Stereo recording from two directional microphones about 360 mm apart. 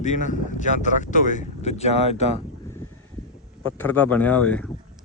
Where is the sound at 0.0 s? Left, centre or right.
Centre.